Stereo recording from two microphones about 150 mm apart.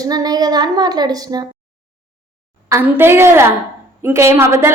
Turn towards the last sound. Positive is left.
turn(degrees=-15)  # may be behind; listen again after turning